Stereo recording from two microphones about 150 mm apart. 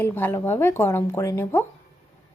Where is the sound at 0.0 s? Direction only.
15° left (ahead or behind).